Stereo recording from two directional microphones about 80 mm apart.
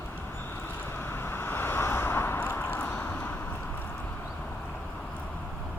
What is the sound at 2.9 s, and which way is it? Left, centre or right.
Vehicle, centre.